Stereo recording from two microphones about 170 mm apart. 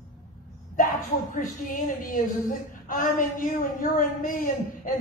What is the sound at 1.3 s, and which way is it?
A woman's voice, 50° left (ahead or behind).